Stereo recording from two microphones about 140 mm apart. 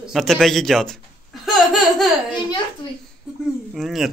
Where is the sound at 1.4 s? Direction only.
Centre (ahead or behind).